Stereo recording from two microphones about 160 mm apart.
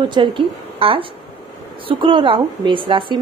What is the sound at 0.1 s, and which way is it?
A woman's voice, 30° right (ahead or behind).